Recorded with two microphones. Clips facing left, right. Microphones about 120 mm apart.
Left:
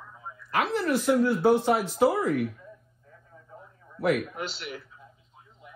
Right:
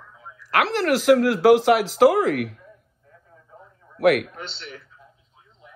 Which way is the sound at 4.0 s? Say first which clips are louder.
Right 7 dB; 80° right.